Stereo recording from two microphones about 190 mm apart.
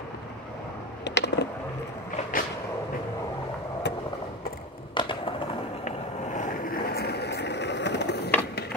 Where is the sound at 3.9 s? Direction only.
65° left (ahead or behind).